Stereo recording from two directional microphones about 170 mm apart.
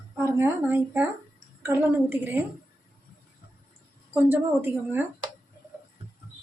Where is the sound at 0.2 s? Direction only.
15° right (ahead or behind).